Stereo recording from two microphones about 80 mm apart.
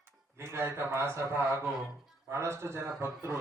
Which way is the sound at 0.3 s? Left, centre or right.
Right.